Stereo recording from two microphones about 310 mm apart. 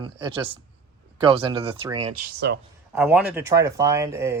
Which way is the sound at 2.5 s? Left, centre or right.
Right.